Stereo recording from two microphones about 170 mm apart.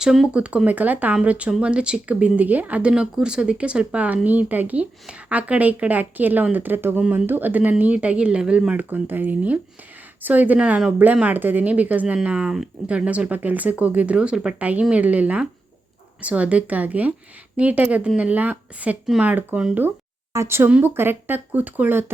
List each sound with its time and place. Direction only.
0.0 s speech: 5° right (ahead or behind)